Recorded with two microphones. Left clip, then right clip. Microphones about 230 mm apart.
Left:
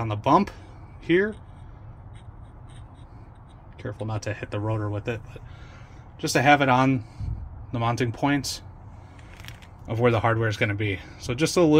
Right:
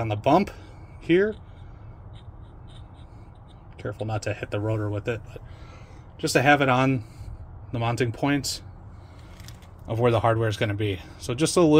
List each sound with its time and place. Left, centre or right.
0.0 s speech: centre
3.7 s speech: centre
9.8 s speech: centre